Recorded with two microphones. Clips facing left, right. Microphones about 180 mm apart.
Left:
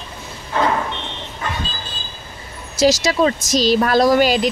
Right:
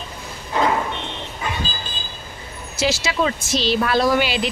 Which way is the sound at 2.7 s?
40° left (ahead or behind).